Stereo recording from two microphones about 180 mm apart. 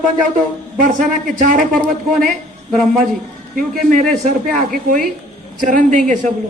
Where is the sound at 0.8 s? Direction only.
50° right (ahead or behind).